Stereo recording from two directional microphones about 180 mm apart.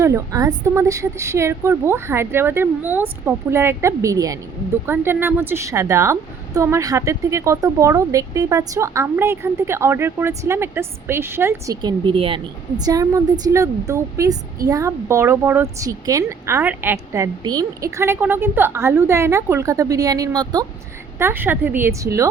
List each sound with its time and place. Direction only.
0.0 s a woman's voice: 15° right (ahead or behind)
21.2 s a woman's voice: 10° right (ahead or behind)